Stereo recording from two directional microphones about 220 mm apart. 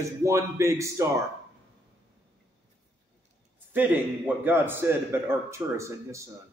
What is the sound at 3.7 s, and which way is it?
A man's voice, 10° right (ahead or behind).